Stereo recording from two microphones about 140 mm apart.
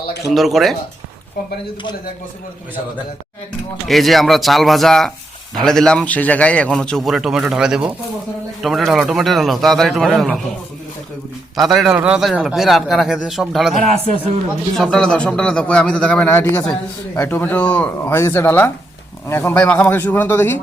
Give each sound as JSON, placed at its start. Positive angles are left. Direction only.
{"t": 0.3, "sound": "a man's voice", "side_deg": 0}
{"t": 3.8, "sound": "a man's voice", "side_deg": 0}
{"t": 11.5, "sound": "a man's voice", "side_deg": 0}
{"t": 13.7, "sound": "a man's voice", "side_deg": -50}
{"t": 14.8, "sound": "a man's voice", "side_deg": 5}